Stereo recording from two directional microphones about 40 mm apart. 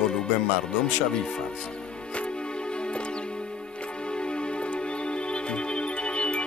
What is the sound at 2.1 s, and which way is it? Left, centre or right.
Music, left.